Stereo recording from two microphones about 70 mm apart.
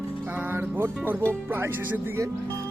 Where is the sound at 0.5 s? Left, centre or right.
Right.